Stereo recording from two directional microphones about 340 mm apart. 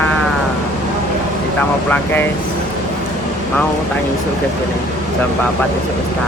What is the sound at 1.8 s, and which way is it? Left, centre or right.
Speech, centre.